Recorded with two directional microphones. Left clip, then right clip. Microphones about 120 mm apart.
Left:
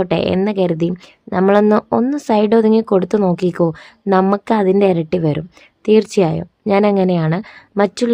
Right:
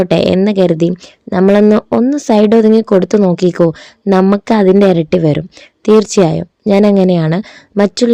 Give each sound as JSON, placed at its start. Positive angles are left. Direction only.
{"t": 0.0, "sound": "speech", "side_deg": -40}